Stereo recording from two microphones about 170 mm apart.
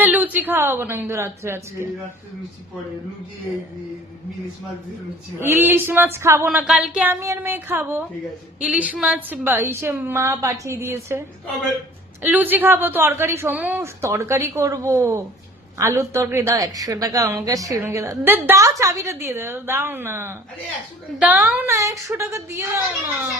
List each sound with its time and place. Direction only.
0.0 s a woman's voice: 10° right (ahead or behind)
5.4 s a woman's voice: 15° right (ahead or behind)
12.2 s a woman's voice: 10° right (ahead or behind)